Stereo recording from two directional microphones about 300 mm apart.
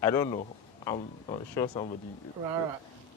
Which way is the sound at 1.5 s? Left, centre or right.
Centre.